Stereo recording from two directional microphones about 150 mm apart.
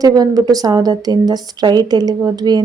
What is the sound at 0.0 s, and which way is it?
Speech, 25° right (ahead or behind).